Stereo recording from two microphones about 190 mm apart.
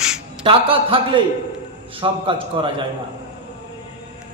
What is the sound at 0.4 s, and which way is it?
A man's voice, 30° right (ahead or behind).